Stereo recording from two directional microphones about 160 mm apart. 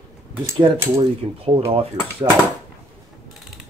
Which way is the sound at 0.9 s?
35° right (ahead or behind).